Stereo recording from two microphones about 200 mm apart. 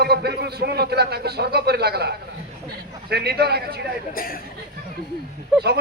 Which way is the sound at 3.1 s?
55° right (ahead or behind).